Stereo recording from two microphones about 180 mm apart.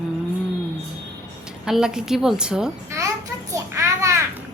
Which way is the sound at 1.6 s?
5° right (ahead or behind).